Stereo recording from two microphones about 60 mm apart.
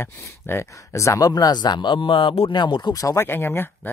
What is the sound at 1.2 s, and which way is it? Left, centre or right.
Speech, left.